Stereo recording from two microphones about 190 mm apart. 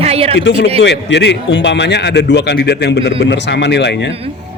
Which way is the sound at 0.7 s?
65° left (ahead or behind).